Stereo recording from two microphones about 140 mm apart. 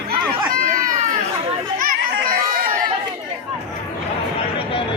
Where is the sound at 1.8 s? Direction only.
85° right.